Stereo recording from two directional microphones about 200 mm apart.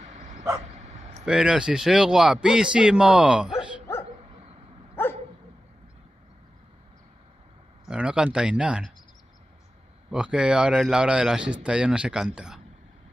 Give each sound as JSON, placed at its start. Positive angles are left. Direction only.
{"t": 0.0, "sound": "bow-wow", "side_deg": -35}
{"t": 1.2, "sound": "a man's voice", "side_deg": -5}
{"t": 5.0, "sound": "dog", "side_deg": 10}
{"t": 7.9, "sound": "speech", "side_deg": -5}
{"t": 10.1, "sound": "a man's voice", "side_deg": -5}